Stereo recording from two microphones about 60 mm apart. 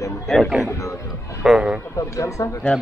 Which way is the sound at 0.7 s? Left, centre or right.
Left.